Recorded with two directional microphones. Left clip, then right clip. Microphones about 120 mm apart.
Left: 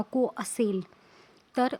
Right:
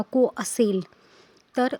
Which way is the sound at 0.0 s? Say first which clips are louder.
Right 6 dB; 25° right (ahead or behind).